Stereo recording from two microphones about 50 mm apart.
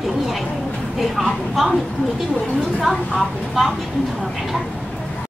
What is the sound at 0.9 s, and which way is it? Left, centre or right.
Speech, centre.